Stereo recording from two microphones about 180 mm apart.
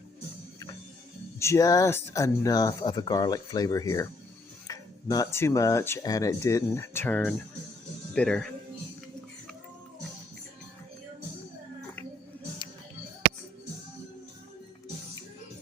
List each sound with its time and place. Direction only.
1.4 s speech: 15° left (ahead or behind)